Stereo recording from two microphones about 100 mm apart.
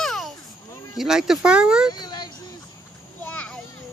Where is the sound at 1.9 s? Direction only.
45° left (ahead or behind).